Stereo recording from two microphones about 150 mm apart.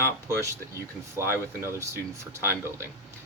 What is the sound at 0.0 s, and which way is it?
Speech, 20° right (ahead or behind).